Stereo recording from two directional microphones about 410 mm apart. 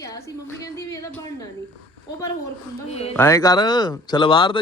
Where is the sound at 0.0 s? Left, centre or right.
Centre.